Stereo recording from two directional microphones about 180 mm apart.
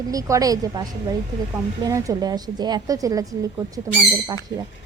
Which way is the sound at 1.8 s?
20° right (ahead or behind).